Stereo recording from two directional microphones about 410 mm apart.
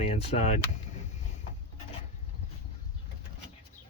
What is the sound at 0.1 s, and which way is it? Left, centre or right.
Speech, centre.